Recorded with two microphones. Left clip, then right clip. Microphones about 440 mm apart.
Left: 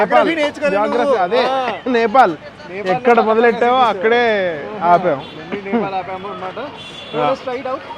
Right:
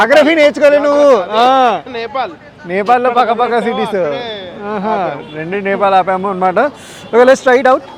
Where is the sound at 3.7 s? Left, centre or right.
Left.